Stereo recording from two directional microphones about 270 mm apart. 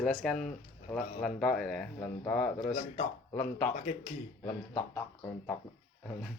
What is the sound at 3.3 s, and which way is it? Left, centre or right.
Speech, centre.